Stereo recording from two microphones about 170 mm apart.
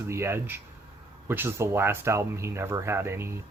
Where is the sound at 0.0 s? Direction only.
15° right (ahead or behind).